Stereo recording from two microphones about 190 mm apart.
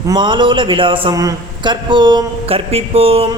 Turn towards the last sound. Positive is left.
turn(degrees=-30)  # may be behind; listen again after turning